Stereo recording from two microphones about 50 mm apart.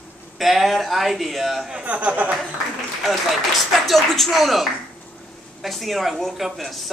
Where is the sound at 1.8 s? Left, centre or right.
Right.